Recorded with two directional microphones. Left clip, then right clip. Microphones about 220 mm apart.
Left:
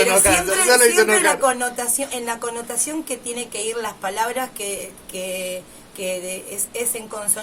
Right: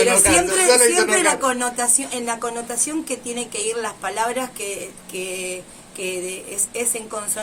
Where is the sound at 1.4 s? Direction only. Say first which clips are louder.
Left 1 dB; 5° right (ahead or behind).